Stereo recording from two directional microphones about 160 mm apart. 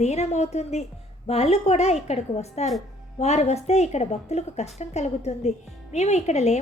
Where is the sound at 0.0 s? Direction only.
45° left (ahead or behind).